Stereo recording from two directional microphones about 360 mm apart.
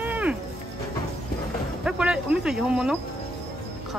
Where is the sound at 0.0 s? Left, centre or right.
Centre.